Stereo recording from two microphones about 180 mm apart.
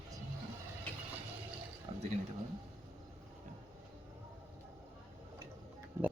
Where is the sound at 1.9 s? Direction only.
30° right (ahead or behind).